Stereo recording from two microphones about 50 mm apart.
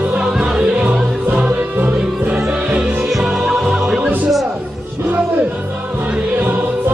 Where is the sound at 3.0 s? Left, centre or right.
Centre.